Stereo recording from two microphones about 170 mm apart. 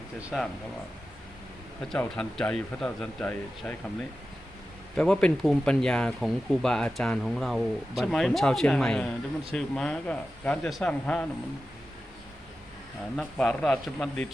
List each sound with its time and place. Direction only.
0.2 s speech: 5° right (ahead or behind)
1.9 s speech: 5° left (ahead or behind)
4.9 s speech: 5° left (ahead or behind)
13.1 s speech: 5° left (ahead or behind)